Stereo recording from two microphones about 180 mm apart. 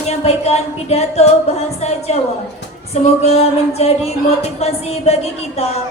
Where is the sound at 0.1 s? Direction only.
35° left (ahead or behind).